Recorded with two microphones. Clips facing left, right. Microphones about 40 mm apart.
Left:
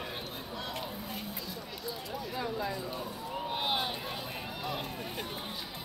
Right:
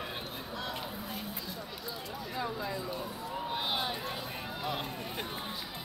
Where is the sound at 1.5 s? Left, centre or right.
Centre.